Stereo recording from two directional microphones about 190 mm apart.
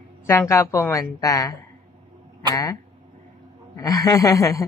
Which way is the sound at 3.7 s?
20° left (ahead or behind).